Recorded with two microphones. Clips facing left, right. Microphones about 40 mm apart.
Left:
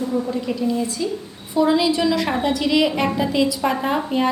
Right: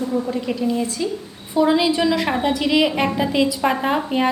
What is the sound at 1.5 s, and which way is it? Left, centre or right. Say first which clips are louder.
A woman's voice: right 1 dB; right.